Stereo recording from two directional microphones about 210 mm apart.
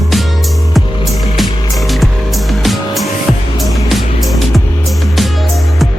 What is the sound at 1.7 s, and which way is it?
Music, centre (ahead or behind).